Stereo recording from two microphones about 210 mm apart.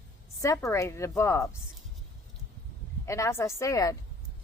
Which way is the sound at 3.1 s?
15° left (ahead or behind).